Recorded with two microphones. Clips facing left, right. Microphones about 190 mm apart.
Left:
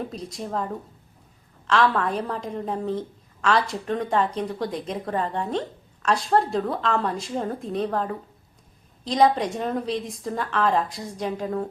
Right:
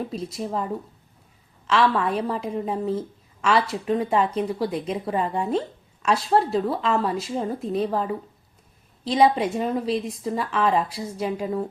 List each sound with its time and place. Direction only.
0.1 s a woman's voice: 5° right (ahead or behind)